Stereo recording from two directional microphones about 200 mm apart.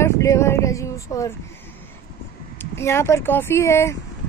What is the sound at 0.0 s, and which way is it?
Speech, 15° left (ahead or behind).